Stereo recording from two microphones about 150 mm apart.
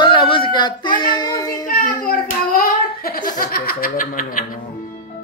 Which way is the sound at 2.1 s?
75° left (ahead or behind).